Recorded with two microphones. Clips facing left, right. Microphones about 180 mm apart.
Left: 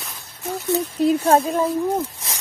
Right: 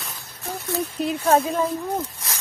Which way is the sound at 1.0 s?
35° left (ahead or behind).